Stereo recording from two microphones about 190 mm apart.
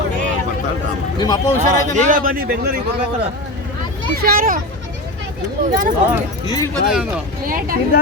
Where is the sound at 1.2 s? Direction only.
20° left (ahead or behind).